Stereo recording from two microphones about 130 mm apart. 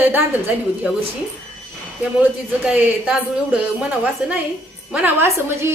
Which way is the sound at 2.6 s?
5° right (ahead or behind).